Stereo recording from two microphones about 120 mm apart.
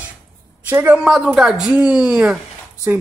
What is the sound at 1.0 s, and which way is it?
Speech, 5° right (ahead or behind).